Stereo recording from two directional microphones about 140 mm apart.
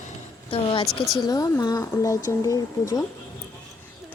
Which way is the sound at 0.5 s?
40° left (ahead or behind).